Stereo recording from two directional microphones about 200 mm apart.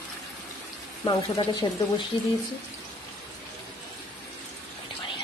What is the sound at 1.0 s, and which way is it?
Speech, 20° left (ahead or behind).